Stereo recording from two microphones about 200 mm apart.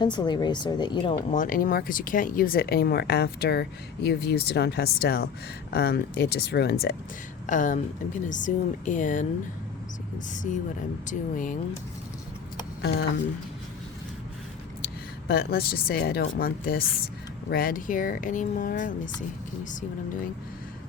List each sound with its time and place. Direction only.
0.0 s speech: 20° left (ahead or behind)
1.3 s speech: 45° left (ahead or behind)
7.4 s speech: 40° left (ahead or behind)
10.3 s speech: 40° left (ahead or behind)
12.8 s speech: 55° left (ahead or behind)
15.3 s speech: 50° left (ahead or behind)